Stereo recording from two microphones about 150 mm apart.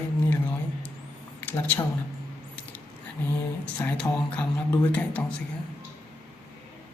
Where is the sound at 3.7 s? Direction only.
10° left (ahead or behind).